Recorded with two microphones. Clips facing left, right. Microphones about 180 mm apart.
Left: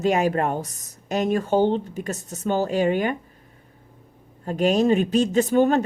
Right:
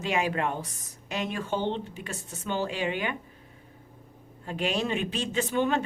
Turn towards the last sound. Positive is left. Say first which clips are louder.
# left 8 dB
turn(degrees=45)  # may be behind; listen again after turning